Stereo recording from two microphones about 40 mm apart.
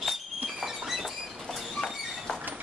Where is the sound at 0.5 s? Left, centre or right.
Centre.